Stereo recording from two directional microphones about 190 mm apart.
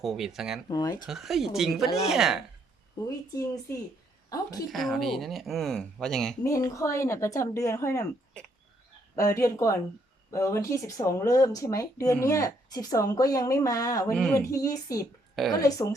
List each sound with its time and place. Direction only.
0.0 s speech: centre (ahead or behind)
0.7 s speech: 20° left (ahead or behind)
1.0 s speech: centre (ahead or behind)
3.3 s speech: 15° left (ahead or behind)
4.7 s speech: centre (ahead or behind)
6.4 s speech: 15° left (ahead or behind)
9.1 s speech: 15° left (ahead or behind)
14.1 s speech: centre (ahead or behind)
14.3 s speech: 15° left (ahead or behind)
15.4 s speech: centre (ahead or behind)